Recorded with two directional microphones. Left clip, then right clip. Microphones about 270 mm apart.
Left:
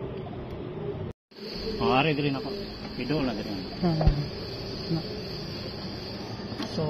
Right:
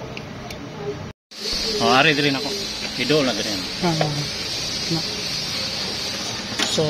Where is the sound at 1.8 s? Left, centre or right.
Right.